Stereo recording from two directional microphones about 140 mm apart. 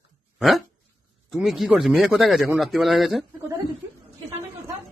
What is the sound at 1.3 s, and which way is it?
A man's voice, centre (ahead or behind).